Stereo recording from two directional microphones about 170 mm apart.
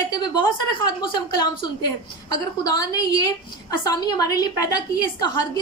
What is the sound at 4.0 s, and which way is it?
A woman's voice, 25° left (ahead or behind).